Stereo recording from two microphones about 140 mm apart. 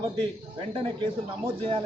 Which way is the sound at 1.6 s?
40° right (ahead or behind).